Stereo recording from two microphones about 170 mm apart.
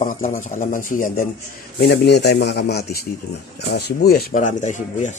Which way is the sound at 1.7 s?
80° left.